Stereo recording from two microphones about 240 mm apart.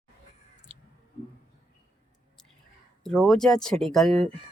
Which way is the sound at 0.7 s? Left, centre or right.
Right.